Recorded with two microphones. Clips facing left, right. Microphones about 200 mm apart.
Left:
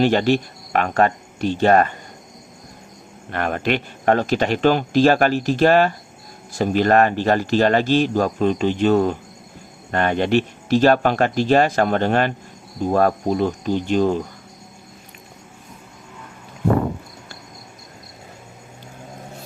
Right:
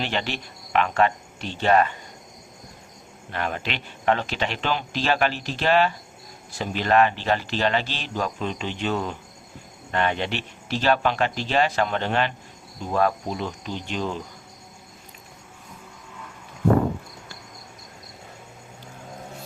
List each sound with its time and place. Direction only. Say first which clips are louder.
0.0 s speech: left 12 dB; 45° left (ahead or behind)
3.3 s speech: left 8 dB; 55° left (ahead or behind)